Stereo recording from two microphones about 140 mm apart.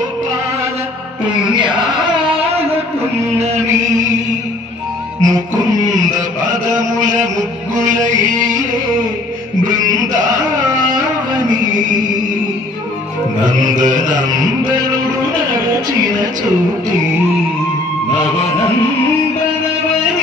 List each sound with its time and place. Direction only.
5.2 s music: 25° right (ahead or behind)
13.8 s mantra: 65° right (ahead or behind)